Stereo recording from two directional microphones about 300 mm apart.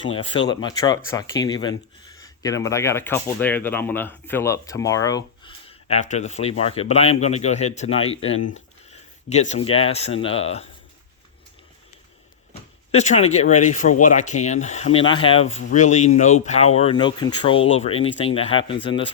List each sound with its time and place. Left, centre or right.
0.1 s speech: centre
12.9 s speech: left